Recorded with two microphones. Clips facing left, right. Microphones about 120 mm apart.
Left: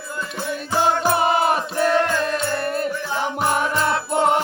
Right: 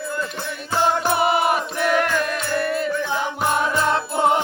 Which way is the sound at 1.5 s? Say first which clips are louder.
Left 1 dB; 35° left (ahead or behind).